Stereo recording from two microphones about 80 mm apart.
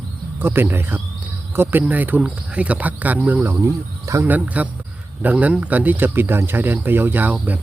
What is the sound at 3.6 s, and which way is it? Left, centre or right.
Speech, right.